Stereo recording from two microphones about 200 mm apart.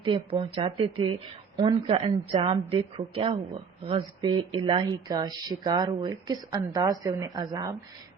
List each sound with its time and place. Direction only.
0.0 s speech: 25° right (ahead or behind)